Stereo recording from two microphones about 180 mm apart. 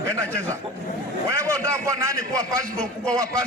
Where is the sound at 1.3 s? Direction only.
15° right (ahead or behind).